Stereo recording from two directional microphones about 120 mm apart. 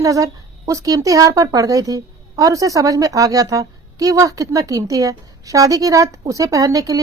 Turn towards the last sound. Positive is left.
turn(degrees=-30)  # may be behind; listen again after turning